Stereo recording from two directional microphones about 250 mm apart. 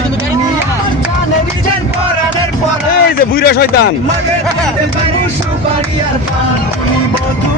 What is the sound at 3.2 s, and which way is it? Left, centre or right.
Speech, left.